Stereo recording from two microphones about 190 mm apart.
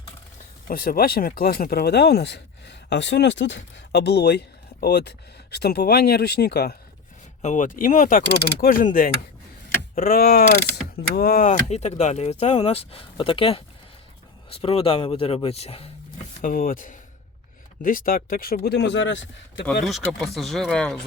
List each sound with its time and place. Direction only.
0.7 s speech: 50° left (ahead or behind)
7.4 s speech: 45° left (ahead or behind)
16.4 s speech: 50° left (ahead or behind); by 19.2 s 75° left (ahead or behind)
19.8 s speech: centre (ahead or behind)